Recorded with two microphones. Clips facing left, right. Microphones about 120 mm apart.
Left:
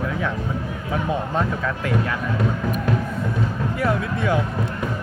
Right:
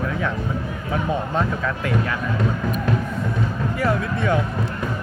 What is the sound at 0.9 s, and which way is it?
Speech, 5° left (ahead or behind).